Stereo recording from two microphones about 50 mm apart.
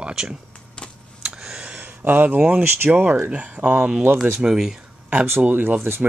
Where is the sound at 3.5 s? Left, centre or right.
Right.